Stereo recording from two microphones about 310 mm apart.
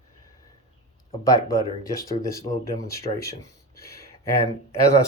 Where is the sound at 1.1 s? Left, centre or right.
Centre.